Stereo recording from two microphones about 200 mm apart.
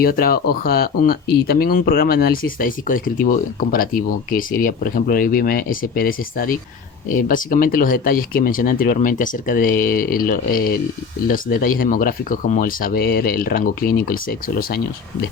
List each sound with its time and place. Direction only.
0.0 s speech: 45° left (ahead or behind)